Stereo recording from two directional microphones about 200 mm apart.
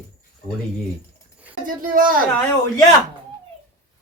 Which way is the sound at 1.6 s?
45° right (ahead or behind).